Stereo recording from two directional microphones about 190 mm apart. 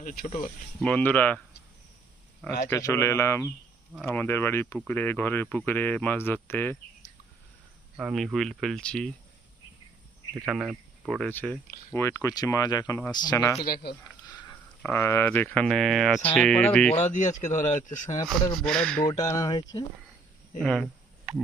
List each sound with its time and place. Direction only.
0.0 s speech: 45° left (ahead or behind)
0.8 s speech: 5° left (ahead or behind)
2.6 s speech: 15° left (ahead or behind)
7.9 s speech: centre (ahead or behind)
10.4 s speech: 5° right (ahead or behind)
11.3 s speech: 10° left (ahead or behind)
14.3 s a sound: 20° left (ahead or behind)
14.8 s speech: 10° left (ahead or behind)
16.9 s speech: 40° left (ahead or behind)
18.6 s speech: 5° left (ahead or behind)
19.0 s speech: 20° left (ahead or behind)
20.6 s speech: 5° left (ahead or behind)